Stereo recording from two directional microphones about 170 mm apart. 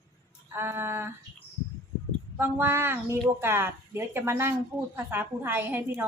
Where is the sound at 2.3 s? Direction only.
15° right (ahead or behind).